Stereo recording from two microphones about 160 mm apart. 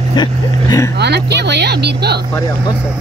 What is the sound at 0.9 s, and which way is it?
Speech, 90° right.